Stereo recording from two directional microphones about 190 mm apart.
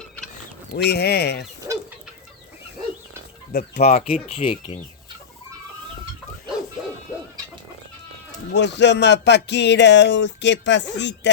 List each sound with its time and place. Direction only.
0.8 s speech: 60° left (ahead or behind)
1.7 s chicken: 15° right (ahead or behind)
3.5 s speech: 55° left (ahead or behind)
3.8 s speech: 35° left (ahead or behind)
8.5 s speech: 65° left (ahead or behind)